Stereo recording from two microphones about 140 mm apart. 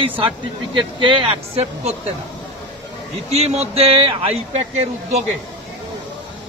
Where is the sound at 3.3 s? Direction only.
50° right (ahead or behind).